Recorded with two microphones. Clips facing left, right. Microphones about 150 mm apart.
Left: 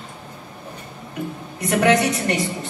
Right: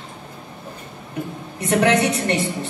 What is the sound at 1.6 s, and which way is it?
Speech, 30° right (ahead or behind).